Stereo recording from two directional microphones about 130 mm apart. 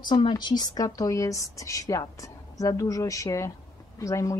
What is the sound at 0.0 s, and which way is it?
Speech, 35° left (ahead or behind).